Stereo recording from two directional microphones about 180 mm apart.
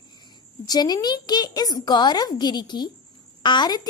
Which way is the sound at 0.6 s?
20° left (ahead or behind).